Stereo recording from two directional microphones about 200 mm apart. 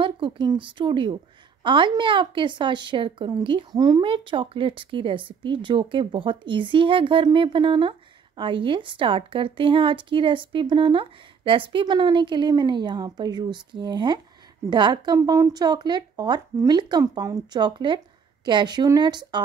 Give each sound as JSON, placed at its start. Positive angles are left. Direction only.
{"t": 0.0, "sound": "a woman's voice", "side_deg": -25}